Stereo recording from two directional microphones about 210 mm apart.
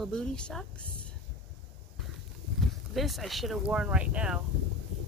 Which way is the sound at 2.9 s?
Centre (ahead or behind).